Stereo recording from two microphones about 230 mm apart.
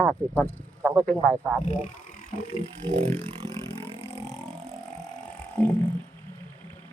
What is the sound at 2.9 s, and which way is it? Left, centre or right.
Vehicle, right.